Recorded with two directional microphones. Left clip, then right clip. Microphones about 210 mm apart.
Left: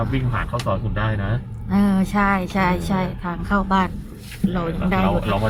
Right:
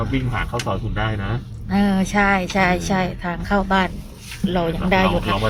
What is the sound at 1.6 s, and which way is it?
A woman's voice, 5° left (ahead or behind).